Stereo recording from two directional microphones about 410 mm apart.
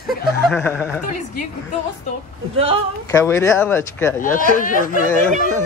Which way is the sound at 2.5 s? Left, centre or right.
Centre.